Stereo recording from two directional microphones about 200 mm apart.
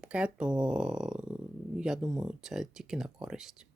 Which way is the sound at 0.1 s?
5° right (ahead or behind).